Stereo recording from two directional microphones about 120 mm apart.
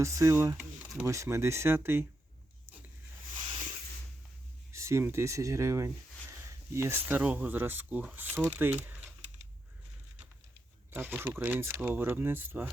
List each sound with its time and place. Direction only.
0.0 s speech: 25° right (ahead or behind)
4.7 s speech: 25° right (ahead or behind)
10.9 s speech: 15° right (ahead or behind)